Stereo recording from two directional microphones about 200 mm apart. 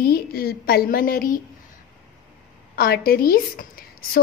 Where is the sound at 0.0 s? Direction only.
50° left (ahead or behind).